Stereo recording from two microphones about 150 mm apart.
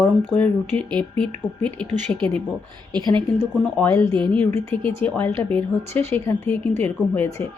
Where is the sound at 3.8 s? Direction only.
5° left (ahead or behind).